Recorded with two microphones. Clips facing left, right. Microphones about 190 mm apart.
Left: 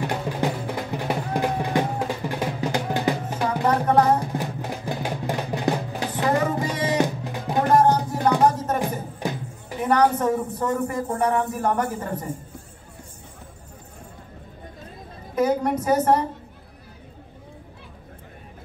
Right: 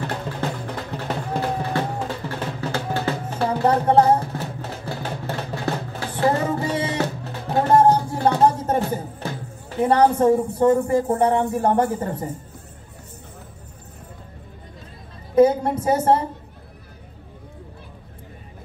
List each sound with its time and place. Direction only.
0.0 s music: 15° left (ahead or behind)
3.6 s music: 30° right (ahead or behind)
4.3 s music: 15° left (ahead or behind)
7.7 s music: 30° right (ahead or behind)
9.2 s music: 15° left (ahead or behind)
9.8 s a man's voice: 30° right (ahead or behind)
15.3 s a sound: 30° right (ahead or behind)